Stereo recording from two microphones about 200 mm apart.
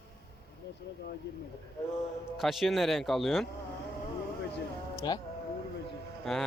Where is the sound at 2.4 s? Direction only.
Centre (ahead or behind).